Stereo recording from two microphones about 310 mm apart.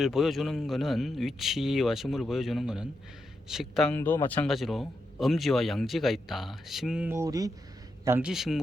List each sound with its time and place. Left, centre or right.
0.0 s a man's voice: centre